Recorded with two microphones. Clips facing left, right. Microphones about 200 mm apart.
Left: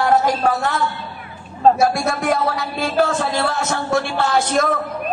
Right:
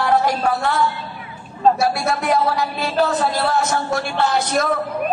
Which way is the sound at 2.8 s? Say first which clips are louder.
Left 1 dB; 50° left (ahead or behind).